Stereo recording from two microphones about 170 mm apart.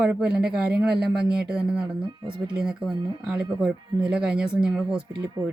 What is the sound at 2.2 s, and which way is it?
Speech, 30° right (ahead or behind).